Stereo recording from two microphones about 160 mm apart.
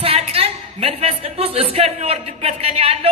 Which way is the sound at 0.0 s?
35° right (ahead or behind).